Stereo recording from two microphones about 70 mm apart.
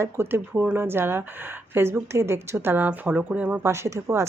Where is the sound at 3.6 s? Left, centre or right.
Right.